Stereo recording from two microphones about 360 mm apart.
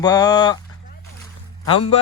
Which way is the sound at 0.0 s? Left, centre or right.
Centre.